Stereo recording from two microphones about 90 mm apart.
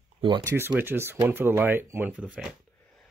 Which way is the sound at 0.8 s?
25° right (ahead or behind).